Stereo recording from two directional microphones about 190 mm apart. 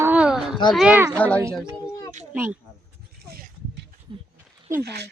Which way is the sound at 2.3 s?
10° right (ahead or behind).